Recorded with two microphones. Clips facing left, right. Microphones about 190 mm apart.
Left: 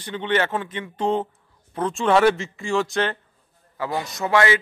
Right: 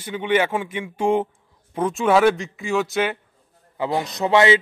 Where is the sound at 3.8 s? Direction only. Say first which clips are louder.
Right 4 dB; 20° right (ahead or behind).